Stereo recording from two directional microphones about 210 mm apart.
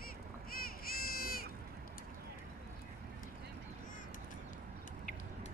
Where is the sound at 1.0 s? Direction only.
45° left (ahead or behind).